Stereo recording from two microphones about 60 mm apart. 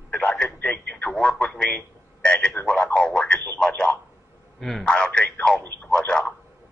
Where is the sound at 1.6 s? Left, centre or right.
Centre.